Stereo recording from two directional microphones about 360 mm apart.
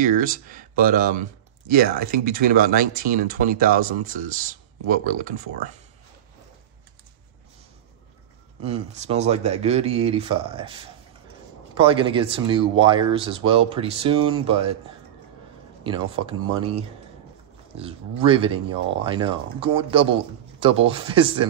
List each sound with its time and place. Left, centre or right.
0.5 s speech: right
8.6 s speech: centre
15.8 s speech: centre
18.2 s speech: centre